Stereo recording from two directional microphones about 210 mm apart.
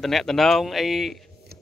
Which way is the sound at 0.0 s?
Centre (ahead or behind).